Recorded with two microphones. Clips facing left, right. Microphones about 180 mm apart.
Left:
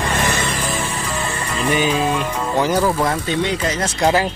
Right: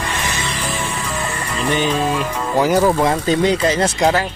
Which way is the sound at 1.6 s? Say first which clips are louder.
Even; 10° left (ahead or behind).